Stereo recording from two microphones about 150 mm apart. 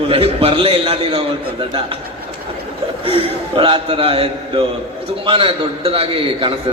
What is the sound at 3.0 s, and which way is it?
A man's voice, 40° right (ahead or behind).